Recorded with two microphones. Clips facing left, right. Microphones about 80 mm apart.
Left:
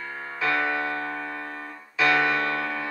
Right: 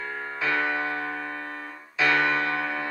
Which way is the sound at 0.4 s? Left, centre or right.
Centre.